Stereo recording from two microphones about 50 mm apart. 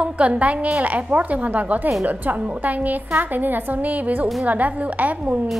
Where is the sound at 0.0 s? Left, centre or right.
Right.